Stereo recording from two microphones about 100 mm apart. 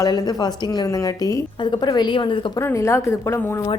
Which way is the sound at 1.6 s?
45° left (ahead or behind).